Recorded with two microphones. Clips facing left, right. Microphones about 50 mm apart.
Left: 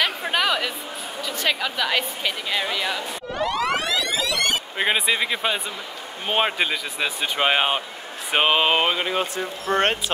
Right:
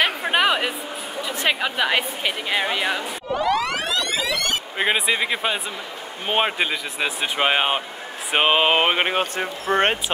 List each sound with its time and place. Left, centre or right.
0.0 s a sound: right
1.2 s speech: right
3.4 s a sound: centre
6.2 s speech: centre
8.9 s speech: right
9.7 s speech: centre